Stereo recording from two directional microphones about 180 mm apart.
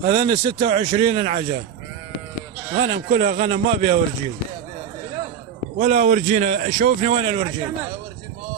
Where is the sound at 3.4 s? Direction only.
35° right (ahead or behind).